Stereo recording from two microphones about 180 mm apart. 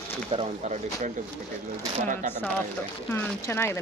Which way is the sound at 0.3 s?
35° right (ahead or behind).